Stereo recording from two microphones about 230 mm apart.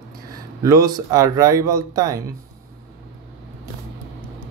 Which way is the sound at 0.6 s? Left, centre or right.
Centre.